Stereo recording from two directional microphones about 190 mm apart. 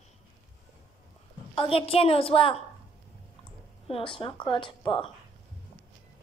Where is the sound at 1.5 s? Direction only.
30° left (ahead or behind).